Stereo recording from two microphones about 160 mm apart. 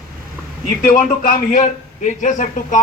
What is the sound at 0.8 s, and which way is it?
Speech, 55° left (ahead or behind).